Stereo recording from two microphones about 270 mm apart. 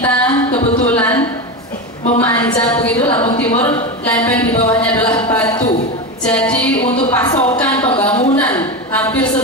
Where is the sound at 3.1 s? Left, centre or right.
Centre.